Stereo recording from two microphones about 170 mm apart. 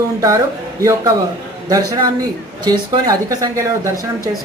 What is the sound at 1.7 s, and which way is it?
A man's voice, 20° right (ahead or behind).